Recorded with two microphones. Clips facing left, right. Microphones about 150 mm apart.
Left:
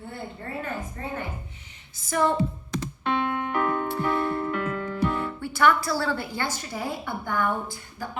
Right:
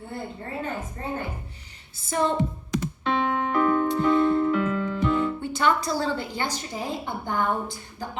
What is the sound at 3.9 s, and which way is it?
Music, 20° right (ahead or behind).